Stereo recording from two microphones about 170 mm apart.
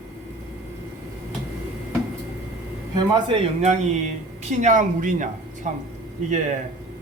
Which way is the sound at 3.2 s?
35° right (ahead or behind).